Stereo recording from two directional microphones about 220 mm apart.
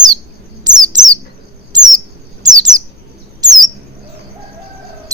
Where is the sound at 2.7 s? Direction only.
15° right (ahead or behind).